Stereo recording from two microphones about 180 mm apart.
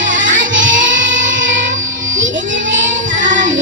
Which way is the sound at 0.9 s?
90° right.